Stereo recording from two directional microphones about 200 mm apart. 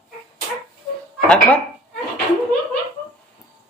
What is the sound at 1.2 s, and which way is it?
Speech, 5° left (ahead or behind).